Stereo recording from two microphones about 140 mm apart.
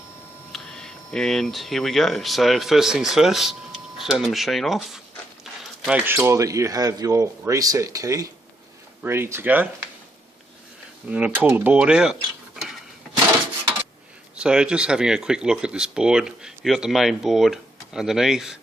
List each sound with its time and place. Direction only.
0.5 s speech: 5° left (ahead or behind)
5.4 s a sound: 5° right (ahead or behind)
6.1 s speech: 15° right (ahead or behind)
11.0 s speech: 10° right (ahead or behind)
14.3 s speech: 5° right (ahead or behind)